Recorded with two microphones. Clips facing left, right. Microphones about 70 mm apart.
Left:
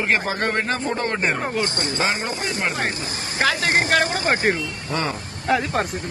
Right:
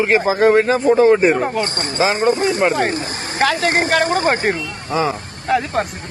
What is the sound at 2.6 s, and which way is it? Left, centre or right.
Speech, centre.